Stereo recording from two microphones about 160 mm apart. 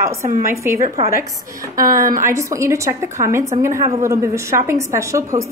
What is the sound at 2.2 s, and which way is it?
A woman's voice, 20° right (ahead or behind).